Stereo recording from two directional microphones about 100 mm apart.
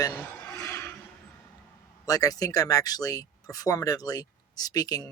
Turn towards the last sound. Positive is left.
turn(degrees=40)  # may be behind; listen again after turning